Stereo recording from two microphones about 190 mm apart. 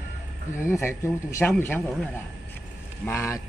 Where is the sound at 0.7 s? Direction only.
15° left (ahead or behind).